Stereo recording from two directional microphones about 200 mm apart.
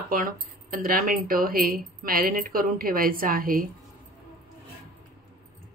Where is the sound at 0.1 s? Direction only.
45° right (ahead or behind).